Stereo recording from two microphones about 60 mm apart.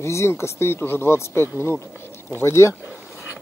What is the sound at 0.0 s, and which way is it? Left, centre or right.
Speech, left.